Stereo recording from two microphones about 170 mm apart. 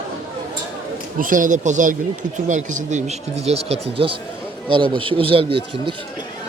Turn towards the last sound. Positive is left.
turn(degrees=-30)  # may be behind; listen again after turning